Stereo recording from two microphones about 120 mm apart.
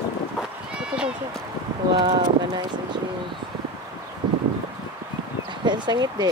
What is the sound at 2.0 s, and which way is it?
Speech, 45° right (ahead or behind).